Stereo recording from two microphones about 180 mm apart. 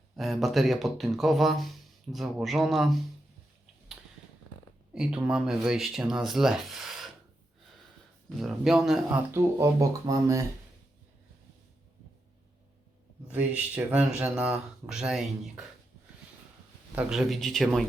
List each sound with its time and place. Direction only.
0.2 s speech: centre (ahead or behind)
4.9 s speech: 5° right (ahead or behind)
8.4 s speech: centre (ahead or behind)
9.3 s speech: 15° right (ahead or behind)
13.3 s speech: 10° right (ahead or behind)
16.9 s speech: 5° right (ahead or behind)